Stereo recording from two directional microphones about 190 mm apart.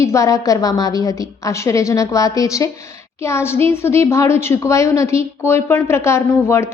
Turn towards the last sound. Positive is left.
turn(degrees=15)  # may be behind; listen again after turning